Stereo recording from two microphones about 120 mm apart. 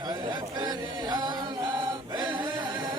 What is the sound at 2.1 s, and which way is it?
Chant, 40° right (ahead or behind).